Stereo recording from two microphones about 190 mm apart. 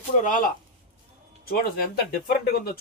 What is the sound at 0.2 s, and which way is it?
Speech, 45° left (ahead or behind).